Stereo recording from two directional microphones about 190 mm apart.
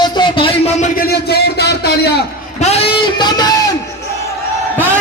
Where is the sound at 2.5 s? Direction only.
35° left (ahead or behind).